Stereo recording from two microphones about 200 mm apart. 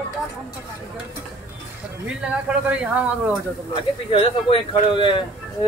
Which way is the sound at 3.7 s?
25° left (ahead or behind).